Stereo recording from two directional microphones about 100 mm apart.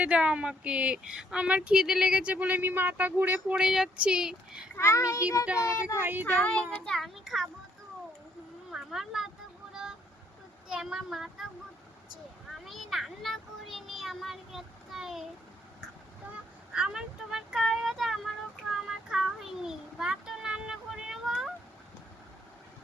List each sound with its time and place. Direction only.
0.0 s speech: 10° right (ahead or behind)
3.5 s speech: 5° right (ahead or behind)
4.7 s child singing: 25° left (ahead or behind)
6.0 s speech: 20° right (ahead or behind)
6.2 s a child's voice: 15° left (ahead or behind)
8.7 s speech: 5° right (ahead or behind)
10.7 s a child's voice: 5° right (ahead or behind)
12.6 s a child's voice: centre (ahead or behind)
16.7 s speech: 10° right (ahead or behind)
18.7 s child singing: 5° right (ahead or behind)